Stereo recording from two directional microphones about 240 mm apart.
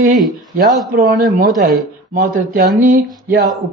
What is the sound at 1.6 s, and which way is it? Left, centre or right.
Speech, right.